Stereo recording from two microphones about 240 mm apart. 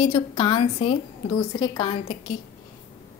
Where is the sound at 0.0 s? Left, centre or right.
Centre.